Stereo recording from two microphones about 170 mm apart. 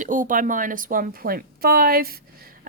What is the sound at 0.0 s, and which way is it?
A woman's voice, 50° right (ahead or behind).